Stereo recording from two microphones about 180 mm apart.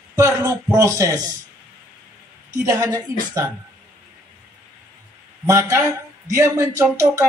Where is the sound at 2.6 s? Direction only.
20° right (ahead or behind).